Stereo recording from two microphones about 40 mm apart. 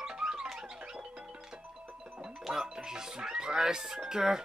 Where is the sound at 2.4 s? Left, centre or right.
Centre.